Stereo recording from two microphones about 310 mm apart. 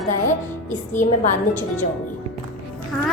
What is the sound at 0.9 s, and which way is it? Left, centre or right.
Speech, left.